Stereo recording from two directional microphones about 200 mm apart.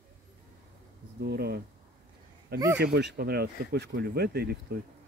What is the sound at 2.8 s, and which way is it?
Speech, 55° right (ahead or behind).